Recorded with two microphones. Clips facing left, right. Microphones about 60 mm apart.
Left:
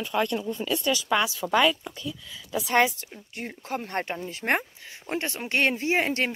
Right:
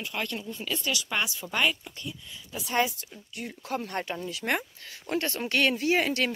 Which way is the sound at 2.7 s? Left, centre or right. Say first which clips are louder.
Left 4 dB; left.